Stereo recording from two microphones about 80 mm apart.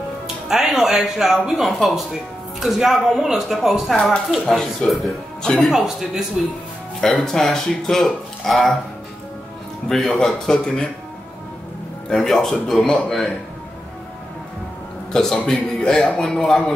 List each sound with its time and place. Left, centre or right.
0.5 s speech: centre
9.8 s a man's voice: centre
12.1 s speech: centre
15.1 s a man's voice: centre